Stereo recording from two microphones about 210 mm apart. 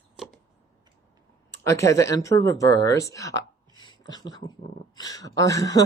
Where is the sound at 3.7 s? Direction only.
20° left (ahead or behind).